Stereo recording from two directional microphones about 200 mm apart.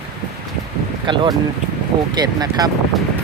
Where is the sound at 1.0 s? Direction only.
25° right (ahead or behind).